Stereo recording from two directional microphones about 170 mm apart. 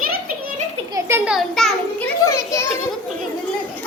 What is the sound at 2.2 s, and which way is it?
Children playing, 20° left (ahead or behind).